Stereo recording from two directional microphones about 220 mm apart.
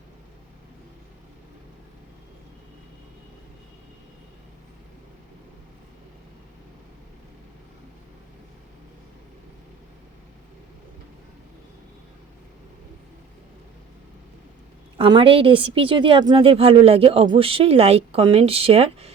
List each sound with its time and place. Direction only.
14.9 s a woman's voice: 25° right (ahead or behind)